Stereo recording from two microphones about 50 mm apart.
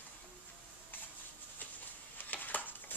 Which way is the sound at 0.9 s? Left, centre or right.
Left.